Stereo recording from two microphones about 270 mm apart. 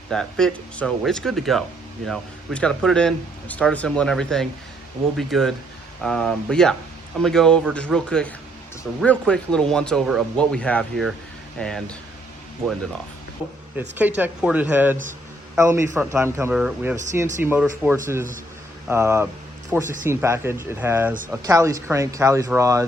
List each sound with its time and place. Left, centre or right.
0.1 s speech: centre
13.7 s speech: centre
19.8 s speech: right
20.1 s speech: centre